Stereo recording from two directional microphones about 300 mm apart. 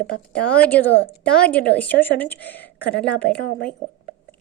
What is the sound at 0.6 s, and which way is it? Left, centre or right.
Speech, centre.